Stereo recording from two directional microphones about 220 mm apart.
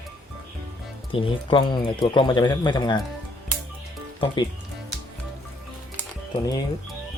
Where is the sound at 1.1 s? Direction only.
25° left (ahead or behind).